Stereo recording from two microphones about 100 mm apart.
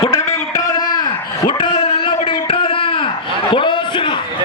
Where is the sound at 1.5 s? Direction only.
50° left (ahead or behind).